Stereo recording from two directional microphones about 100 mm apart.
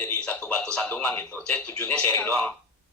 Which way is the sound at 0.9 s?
15° left (ahead or behind).